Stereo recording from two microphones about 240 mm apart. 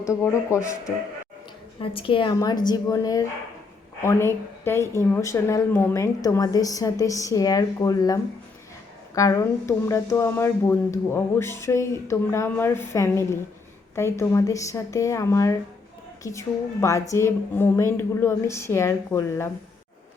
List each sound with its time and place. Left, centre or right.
0.0 s speech: centre